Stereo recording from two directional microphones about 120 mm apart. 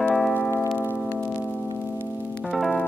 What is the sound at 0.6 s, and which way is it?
Music, 10° left (ahead or behind).